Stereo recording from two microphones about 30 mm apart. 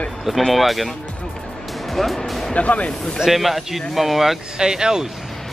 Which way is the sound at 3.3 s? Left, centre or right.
Centre.